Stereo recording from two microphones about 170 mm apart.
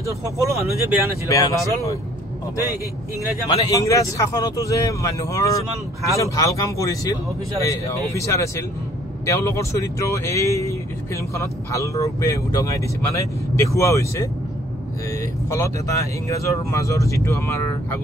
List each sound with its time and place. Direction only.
0.0 s speech: 15° right (ahead or behind)
1.2 s speech: 20° left (ahead or behind)
3.4 s speech: 20° left (ahead or behind)
15.5 s speech: 20° left (ahead or behind)